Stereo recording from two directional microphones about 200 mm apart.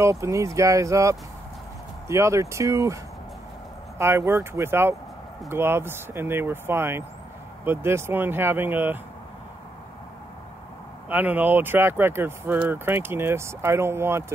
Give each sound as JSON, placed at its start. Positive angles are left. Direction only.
{"t": 0.0, "sound": "speech", "side_deg": -15}
{"t": 4.0, "sound": "speech", "side_deg": -10}
{"t": 11.1, "sound": "speech", "side_deg": -10}